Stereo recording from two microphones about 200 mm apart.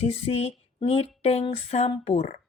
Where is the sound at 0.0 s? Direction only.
30° left (ahead or behind).